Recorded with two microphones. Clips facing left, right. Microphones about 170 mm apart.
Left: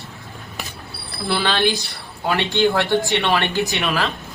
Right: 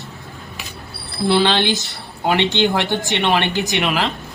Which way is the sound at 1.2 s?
20° right (ahead or behind).